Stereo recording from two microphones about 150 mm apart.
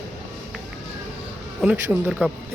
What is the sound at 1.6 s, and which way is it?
Speech, 5° right (ahead or behind).